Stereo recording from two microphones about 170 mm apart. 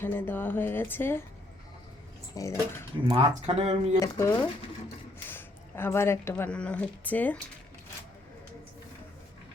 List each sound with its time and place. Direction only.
0.0 s speech: 10° left (ahead or behind)
2.3 s speech: 20° left (ahead or behind)
3.1 s speech: 35° right (ahead or behind)
4.0 s a woman's voice: 15° left (ahead or behind)